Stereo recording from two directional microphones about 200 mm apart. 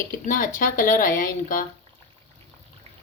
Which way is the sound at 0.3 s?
40° left (ahead or behind).